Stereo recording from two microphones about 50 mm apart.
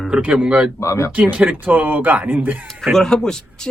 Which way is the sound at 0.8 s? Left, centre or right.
Left.